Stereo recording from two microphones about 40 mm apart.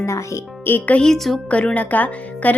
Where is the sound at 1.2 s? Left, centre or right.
Centre.